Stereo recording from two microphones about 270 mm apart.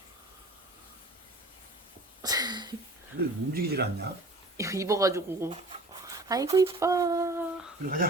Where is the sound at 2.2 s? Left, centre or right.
Centre.